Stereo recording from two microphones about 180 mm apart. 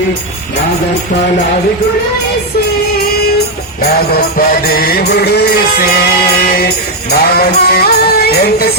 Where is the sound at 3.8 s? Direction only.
60° left (ahead or behind).